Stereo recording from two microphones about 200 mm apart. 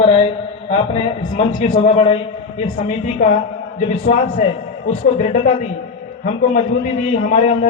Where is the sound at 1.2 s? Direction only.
35° left (ahead or behind).